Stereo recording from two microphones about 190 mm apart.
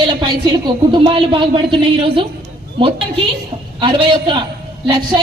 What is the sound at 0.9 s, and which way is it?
Speech, 25° right (ahead or behind).